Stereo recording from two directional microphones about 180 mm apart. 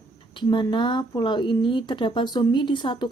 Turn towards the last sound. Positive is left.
turn(degrees=25)  # may be behind; listen again after turning